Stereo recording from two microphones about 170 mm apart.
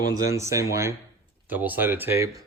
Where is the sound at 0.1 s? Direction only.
20° right (ahead or behind).